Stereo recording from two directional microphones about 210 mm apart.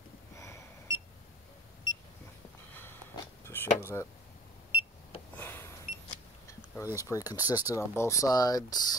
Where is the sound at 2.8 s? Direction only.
10° left (ahead or behind).